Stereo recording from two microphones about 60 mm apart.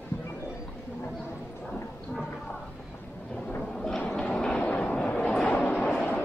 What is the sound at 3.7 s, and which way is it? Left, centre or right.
Train, centre.